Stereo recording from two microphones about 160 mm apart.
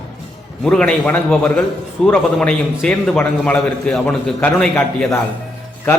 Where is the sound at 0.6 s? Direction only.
5° left (ahead or behind).